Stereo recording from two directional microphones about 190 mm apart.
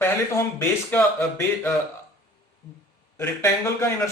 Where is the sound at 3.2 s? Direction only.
15° left (ahead or behind).